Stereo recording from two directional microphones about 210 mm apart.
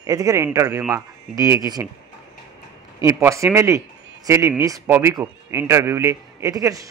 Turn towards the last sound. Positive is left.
turn(degrees=-15)  # may be behind; listen again after turning